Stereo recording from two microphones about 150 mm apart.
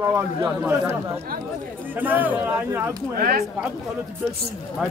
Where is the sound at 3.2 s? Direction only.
75° right (ahead or behind).